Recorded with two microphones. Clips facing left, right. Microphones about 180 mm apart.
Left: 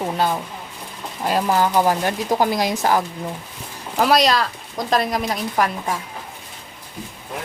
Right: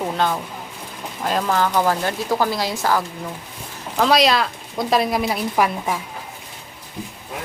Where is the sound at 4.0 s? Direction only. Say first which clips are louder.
Even; centre (ahead or behind).